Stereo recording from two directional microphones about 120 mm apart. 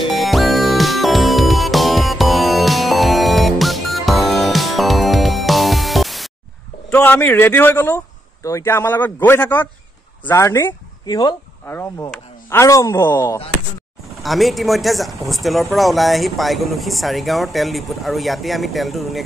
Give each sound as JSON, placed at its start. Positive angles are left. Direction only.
{"t": 0.1, "sound": "music", "side_deg": 0}
{"t": 6.9, "sound": "a man's voice", "side_deg": 15}
{"t": 12.4, "sound": "speech", "side_deg": 25}
{"t": 14.2, "sound": "speech", "side_deg": 0}